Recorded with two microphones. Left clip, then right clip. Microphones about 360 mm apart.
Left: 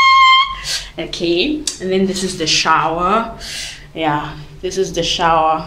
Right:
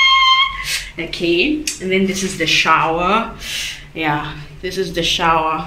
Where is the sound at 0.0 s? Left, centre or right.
Centre.